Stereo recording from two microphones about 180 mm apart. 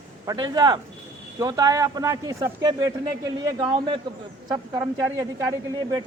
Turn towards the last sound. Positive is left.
turn(degrees=-20)  # may be behind; listen again after turning